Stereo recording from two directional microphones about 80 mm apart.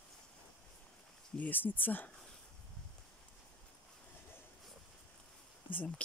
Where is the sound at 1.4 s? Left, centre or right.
Left.